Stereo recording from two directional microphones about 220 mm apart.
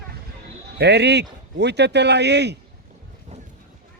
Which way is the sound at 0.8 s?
50° right (ahead or behind).